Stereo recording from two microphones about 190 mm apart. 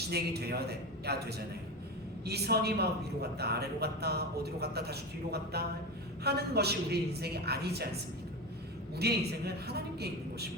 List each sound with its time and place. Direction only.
0.1 s a man's voice: 60° right (ahead or behind)
9.0 s a man's voice: 60° right (ahead or behind)